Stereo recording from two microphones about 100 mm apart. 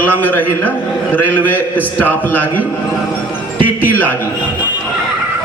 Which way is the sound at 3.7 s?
20° left (ahead or behind).